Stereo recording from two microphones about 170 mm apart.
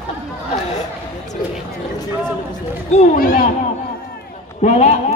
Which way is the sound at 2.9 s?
40° left (ahead or behind).